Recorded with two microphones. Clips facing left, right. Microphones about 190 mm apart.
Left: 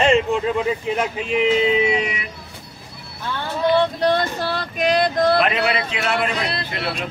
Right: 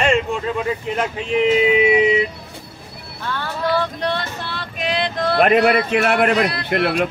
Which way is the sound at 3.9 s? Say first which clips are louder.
Left 5 dB; 40° left (ahead or behind).